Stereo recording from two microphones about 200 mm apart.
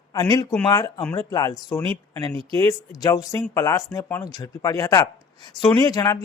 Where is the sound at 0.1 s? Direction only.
20° left (ahead or behind).